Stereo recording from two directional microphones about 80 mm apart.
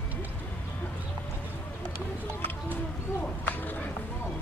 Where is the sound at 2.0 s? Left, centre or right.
Left.